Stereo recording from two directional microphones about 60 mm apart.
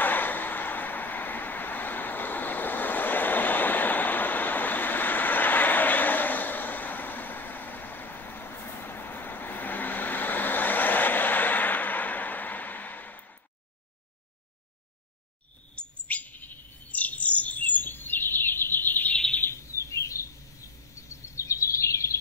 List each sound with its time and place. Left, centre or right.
0.0 s vehicle: left
15.7 s bird: left
19.4 s a sound: left
21.4 s bird vocalization: left